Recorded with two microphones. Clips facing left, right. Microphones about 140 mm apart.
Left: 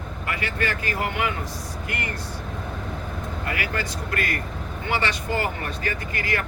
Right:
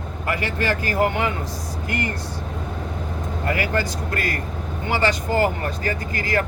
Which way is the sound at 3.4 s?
35° right (ahead or behind).